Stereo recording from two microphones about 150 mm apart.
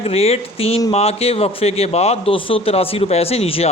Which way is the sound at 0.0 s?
45° left (ahead or behind).